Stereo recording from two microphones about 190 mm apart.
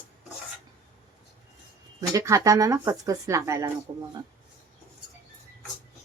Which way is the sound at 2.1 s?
15° right (ahead or behind).